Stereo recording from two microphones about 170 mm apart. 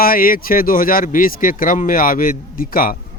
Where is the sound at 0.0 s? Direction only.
55° left (ahead or behind).